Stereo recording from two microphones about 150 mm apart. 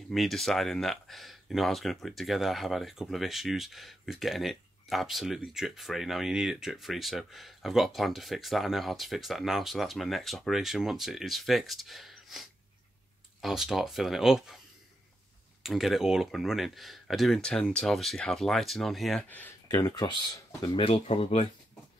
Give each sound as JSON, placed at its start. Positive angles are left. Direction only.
{"t": 0.1, "sound": "speech", "side_deg": 0}
{"t": 15.6, "sound": "speech", "side_deg": 0}
{"t": 19.2, "sound": "speech", "side_deg": 10}
{"t": 19.7, "sound": "speech", "side_deg": 25}
{"t": 20.9, "sound": "speech", "side_deg": 45}